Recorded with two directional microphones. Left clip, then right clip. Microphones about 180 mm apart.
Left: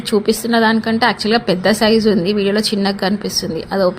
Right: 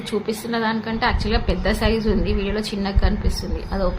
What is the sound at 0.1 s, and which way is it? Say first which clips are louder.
A woman's voice: left 9 dB; 45° left (ahead or behind).